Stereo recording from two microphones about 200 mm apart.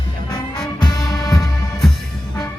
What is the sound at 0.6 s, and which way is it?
Music, 20° left (ahead or behind).